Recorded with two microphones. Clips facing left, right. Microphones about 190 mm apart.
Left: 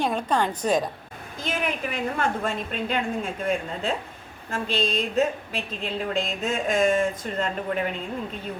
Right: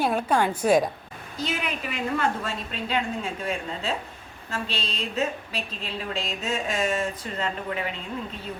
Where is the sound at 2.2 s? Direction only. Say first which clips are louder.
Left 2 dB; 55° left (ahead or behind).